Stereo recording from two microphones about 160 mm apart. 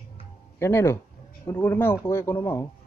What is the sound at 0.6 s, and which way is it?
Speech, 15° left (ahead or behind).